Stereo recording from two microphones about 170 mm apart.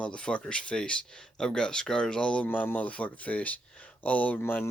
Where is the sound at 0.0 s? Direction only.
5° left (ahead or behind).